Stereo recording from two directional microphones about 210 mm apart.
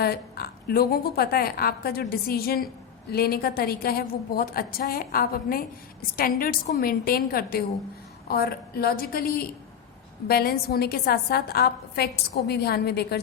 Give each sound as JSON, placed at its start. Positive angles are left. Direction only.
{"t": 0.0, "sound": "a woman's voice", "side_deg": 45}